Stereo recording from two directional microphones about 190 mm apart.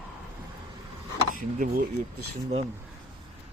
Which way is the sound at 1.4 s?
45° right (ahead or behind).